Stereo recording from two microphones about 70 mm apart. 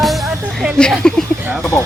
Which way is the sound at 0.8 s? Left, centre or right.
Centre.